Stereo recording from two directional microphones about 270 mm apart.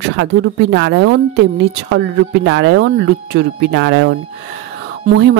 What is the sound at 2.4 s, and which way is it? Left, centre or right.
Speech, right.